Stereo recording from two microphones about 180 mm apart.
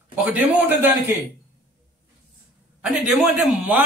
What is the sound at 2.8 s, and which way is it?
Speech, centre (ahead or behind).